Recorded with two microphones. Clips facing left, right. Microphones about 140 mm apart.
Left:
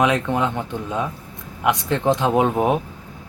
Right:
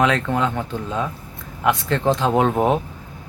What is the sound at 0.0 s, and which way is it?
Speech, 15° left (ahead or behind).